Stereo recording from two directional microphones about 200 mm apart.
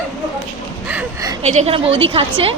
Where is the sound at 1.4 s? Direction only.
35° right (ahead or behind).